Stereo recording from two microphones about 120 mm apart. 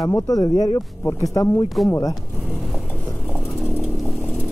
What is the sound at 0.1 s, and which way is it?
Speech, 30° left (ahead or behind).